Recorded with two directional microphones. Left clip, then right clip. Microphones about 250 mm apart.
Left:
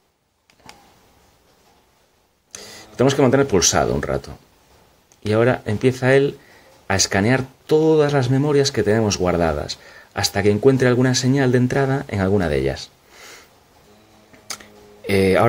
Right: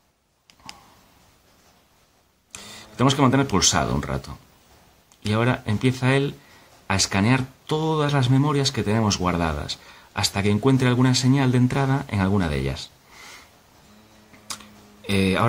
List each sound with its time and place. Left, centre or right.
2.5 s speech: centre
5.3 s speech: centre
14.5 s a sound: centre